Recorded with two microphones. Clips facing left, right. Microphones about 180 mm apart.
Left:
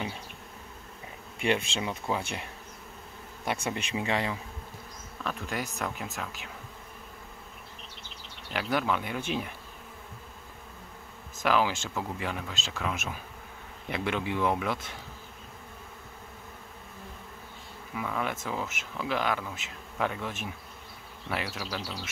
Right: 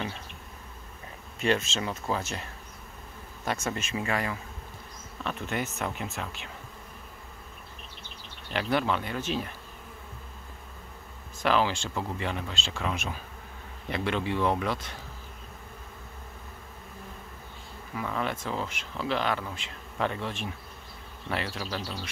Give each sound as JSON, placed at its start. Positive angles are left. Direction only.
{"t": 1.4, "sound": "speech", "side_deg": 15}
{"t": 3.4, "sound": "speech", "side_deg": 15}
{"t": 5.2, "sound": "speech", "side_deg": 0}
{"t": 8.5, "sound": "speech", "side_deg": 5}
{"t": 11.4, "sound": "speech", "side_deg": 10}
{"t": 17.9, "sound": "speech", "side_deg": 5}